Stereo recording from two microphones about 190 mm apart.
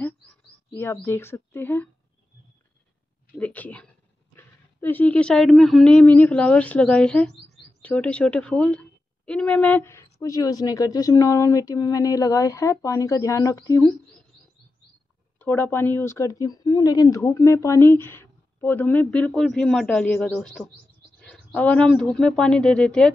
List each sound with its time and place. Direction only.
0.7 s speech: 10° left (ahead or behind)
3.3 s speech: 10° left (ahead or behind)
15.3 s speech: 10° left (ahead or behind)